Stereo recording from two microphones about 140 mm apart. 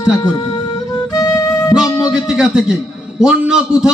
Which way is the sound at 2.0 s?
5° right (ahead or behind).